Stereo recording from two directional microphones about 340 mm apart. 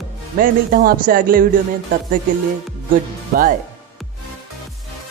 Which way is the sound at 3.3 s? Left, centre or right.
Right.